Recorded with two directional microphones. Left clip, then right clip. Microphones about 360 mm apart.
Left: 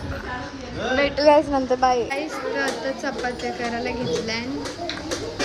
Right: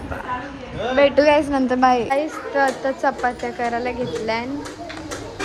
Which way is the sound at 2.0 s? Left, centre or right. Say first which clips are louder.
Right 4 dB; centre.